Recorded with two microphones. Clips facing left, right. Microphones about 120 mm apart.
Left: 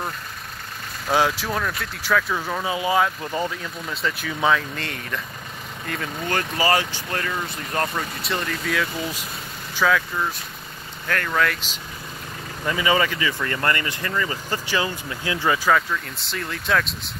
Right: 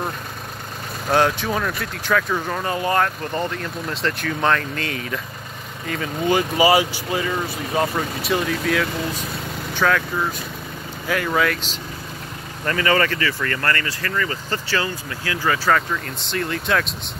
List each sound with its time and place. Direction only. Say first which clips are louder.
1.1 s speech: right 2 dB; 5° left (ahead or behind)
6.2 s speech: right 6 dB; 15° right (ahead or behind)
11.1 s speech: right 2 dB; 10° right (ahead or behind)
12.6 s speech: right 2 dB; 10° left (ahead or behind)
15.7 s speech: right 1 dB; centre (ahead or behind)